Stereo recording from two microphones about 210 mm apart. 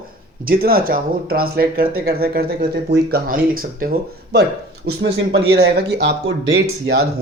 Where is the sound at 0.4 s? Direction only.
45° right (ahead or behind).